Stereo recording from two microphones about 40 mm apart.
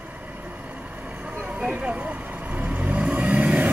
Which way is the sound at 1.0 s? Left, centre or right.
Right.